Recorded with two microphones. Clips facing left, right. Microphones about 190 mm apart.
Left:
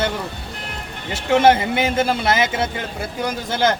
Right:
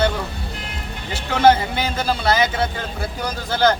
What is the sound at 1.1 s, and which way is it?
A man's voice, 20° left (ahead or behind).